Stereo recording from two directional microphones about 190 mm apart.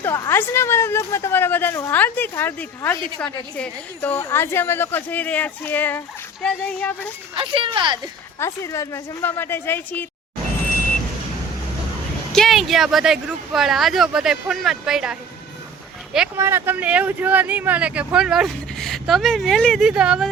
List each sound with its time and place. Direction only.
0.0 s a woman's voice: 10° left (ahead or behind)
7.3 s speech: 30° right (ahead or behind)
8.4 s a woman's voice: 15° left (ahead or behind)
12.3 s speech: centre (ahead or behind)